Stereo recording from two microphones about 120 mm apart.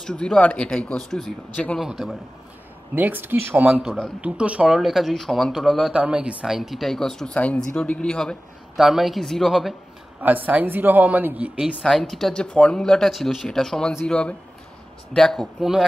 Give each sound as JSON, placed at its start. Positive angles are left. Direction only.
{"t": 0.0, "sound": "speech", "side_deg": 5}
{"t": 2.9, "sound": "speech", "side_deg": -15}
{"t": 10.2, "sound": "speech", "side_deg": -15}
{"t": 11.8, "sound": "speech", "side_deg": 0}